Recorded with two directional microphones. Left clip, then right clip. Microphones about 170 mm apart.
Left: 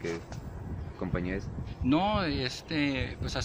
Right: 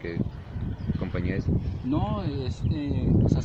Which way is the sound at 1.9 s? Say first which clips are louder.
Left 3 dB; 20° left (ahead or behind).